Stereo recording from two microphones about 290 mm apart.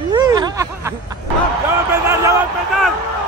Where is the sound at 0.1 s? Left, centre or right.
Centre.